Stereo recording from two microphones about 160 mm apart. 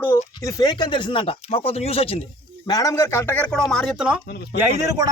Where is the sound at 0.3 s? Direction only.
25° left (ahead or behind).